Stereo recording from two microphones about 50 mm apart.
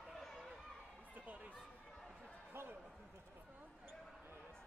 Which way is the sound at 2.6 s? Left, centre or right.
Right.